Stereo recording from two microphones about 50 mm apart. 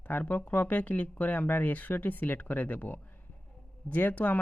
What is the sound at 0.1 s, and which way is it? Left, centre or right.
Speech, left.